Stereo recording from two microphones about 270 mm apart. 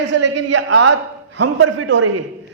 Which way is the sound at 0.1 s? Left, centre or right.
Right.